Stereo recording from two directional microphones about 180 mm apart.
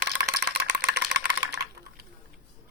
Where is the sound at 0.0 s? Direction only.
65° right (ahead or behind).